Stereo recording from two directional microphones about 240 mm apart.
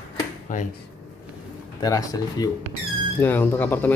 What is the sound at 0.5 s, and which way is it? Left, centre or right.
Speech, left.